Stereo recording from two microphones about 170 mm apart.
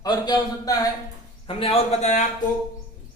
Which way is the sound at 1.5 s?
35° left (ahead or behind).